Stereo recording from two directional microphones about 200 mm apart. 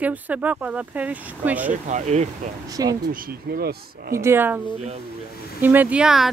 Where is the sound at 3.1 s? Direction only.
45° right (ahead or behind).